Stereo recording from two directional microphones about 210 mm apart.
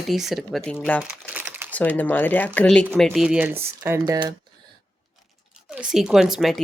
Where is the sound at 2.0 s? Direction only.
10° left (ahead or behind); by 4.4 s 15° right (ahead or behind).